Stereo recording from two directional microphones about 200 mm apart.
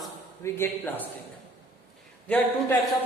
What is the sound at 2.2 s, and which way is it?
Speech, 10° left (ahead or behind).